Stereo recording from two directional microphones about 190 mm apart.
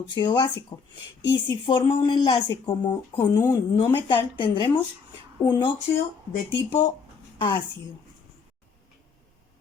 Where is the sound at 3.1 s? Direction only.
15° left (ahead or behind).